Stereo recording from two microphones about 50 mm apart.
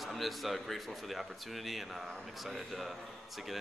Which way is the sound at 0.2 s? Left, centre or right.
Centre.